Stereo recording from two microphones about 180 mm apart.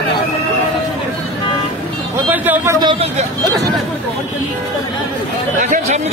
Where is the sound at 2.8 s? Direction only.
35° right (ahead or behind).